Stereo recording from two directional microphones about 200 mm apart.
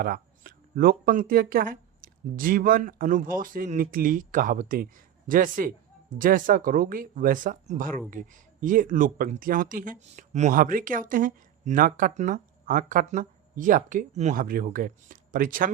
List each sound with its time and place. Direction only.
0.0 s speech: 45° right (ahead or behind)